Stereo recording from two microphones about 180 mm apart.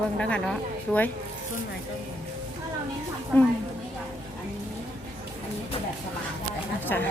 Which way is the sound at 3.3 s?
10° left (ahead or behind).